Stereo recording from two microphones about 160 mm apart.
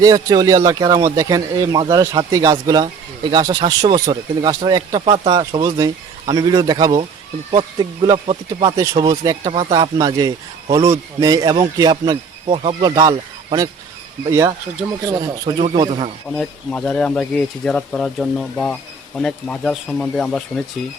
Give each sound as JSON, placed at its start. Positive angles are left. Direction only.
{"t": 0.0, "sound": "speech", "side_deg": -25}
{"t": 8.7, "sound": "speech", "side_deg": -20}
{"t": 15.2, "sound": "speech", "side_deg": -30}
{"t": 16.3, "sound": "speech", "side_deg": 5}